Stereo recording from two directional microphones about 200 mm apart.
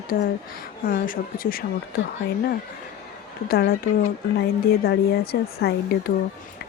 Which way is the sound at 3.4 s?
50° left (ahead or behind).